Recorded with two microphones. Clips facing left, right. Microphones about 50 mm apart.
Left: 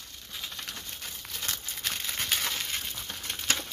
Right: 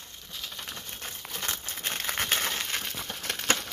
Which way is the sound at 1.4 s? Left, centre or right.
Right.